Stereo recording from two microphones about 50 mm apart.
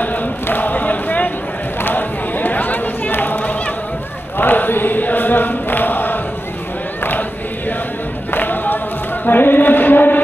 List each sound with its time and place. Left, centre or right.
0.0 s chant: left
1.8 s chatter: left
4.4 s chant: left
7.0 s choir: left
8.3 s a sound: left